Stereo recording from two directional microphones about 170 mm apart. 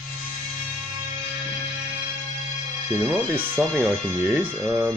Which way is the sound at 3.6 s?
15° right (ahead or behind).